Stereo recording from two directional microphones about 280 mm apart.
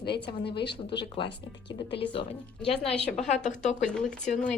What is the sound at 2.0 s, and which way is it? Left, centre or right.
Speech, centre.